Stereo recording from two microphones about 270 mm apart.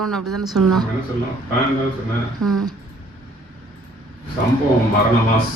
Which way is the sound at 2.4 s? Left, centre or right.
Right.